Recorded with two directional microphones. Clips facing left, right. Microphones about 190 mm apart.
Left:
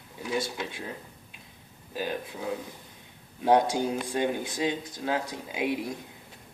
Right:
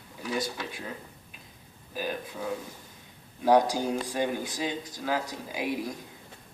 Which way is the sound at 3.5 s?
25° left (ahead or behind).